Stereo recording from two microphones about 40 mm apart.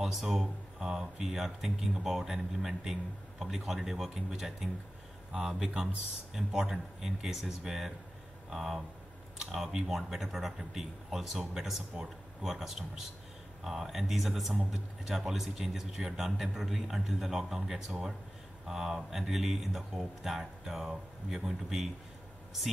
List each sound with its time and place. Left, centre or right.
0.0 s speech: centre
5.3 s speech: right
6.3 s speech: centre